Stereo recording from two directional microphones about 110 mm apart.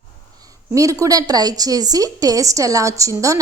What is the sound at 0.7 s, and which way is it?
A woman's voice, 30° right (ahead or behind).